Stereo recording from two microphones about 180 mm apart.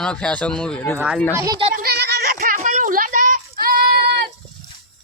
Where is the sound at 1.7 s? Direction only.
60° right (ahead or behind).